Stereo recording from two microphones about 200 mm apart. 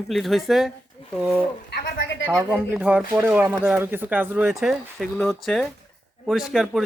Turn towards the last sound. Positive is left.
turn(degrees=0)  # may be behind; listen again after turning